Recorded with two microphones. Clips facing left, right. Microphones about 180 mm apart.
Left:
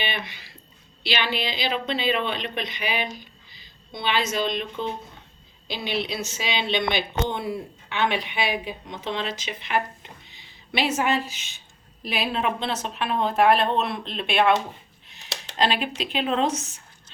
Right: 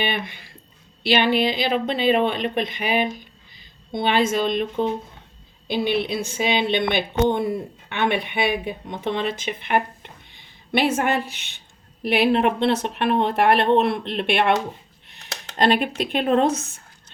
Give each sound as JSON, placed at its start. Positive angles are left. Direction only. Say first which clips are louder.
{"t": 0.0, "sound": "speech", "louder": "right 5 dB", "side_deg": -50}